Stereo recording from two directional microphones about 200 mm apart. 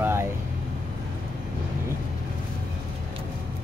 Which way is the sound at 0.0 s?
10° right (ahead or behind).